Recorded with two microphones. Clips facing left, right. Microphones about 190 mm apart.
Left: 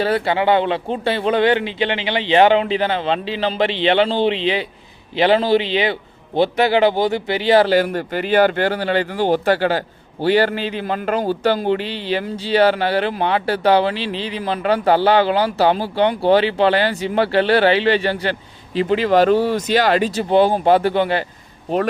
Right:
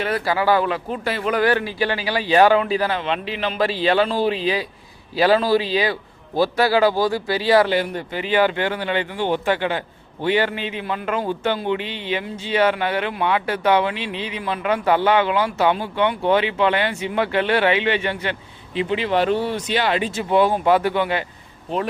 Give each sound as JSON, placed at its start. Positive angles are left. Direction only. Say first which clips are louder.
{"t": 0.0, "sound": "a man's voice", "louder": "left 3 dB", "side_deg": 30}
{"t": 7.7, "sound": "speech", "louder": "left 5 dB", "side_deg": 45}